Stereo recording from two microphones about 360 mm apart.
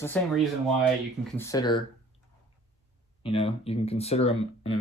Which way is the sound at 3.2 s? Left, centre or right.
Centre.